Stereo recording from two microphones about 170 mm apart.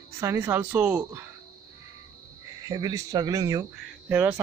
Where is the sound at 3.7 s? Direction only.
5° right (ahead or behind).